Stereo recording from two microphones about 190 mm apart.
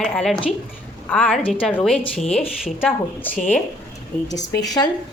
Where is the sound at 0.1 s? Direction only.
5° left (ahead or behind).